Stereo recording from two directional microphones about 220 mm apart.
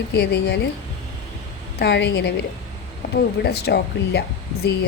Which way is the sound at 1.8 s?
50° left (ahead or behind).